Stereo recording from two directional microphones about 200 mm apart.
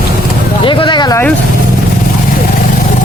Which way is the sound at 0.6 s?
25° left (ahead or behind).